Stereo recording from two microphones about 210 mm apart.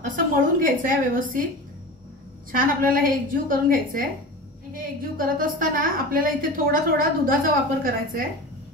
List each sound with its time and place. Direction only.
0.0 s a woman's voice: 40° right (ahead or behind)
2.6 s a woman's voice: 40° right (ahead or behind)